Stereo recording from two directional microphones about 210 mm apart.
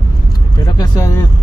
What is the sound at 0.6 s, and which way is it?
Speech, 20° left (ahead or behind).